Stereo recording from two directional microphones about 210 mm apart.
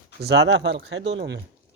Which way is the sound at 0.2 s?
50° right (ahead or behind).